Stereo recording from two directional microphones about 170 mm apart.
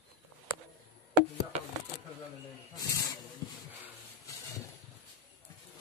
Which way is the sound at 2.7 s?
20° left (ahead or behind).